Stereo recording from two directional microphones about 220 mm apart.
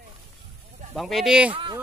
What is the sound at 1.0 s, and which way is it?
Speech, centre (ahead or behind).